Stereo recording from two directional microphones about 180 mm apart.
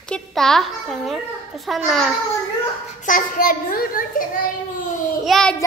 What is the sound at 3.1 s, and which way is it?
A child's voice, 50° left (ahead or behind).